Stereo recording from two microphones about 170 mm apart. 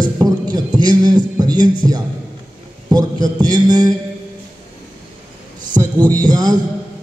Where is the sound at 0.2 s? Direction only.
25° right (ahead or behind).